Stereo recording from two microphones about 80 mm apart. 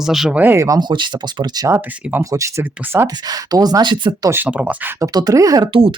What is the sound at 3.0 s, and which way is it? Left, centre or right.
Speech, right.